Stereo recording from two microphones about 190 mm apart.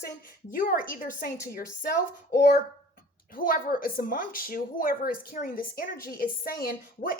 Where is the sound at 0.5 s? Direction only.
45° left (ahead or behind).